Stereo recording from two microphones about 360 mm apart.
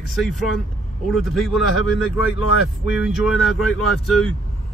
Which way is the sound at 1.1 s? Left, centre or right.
Centre.